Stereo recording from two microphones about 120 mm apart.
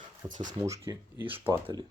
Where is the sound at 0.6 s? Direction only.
25° right (ahead or behind).